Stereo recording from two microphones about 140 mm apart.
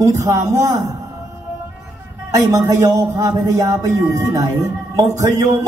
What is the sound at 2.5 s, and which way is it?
A man's voice, 20° right (ahead or behind).